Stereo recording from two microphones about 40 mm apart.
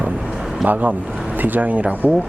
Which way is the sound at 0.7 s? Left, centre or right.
Right.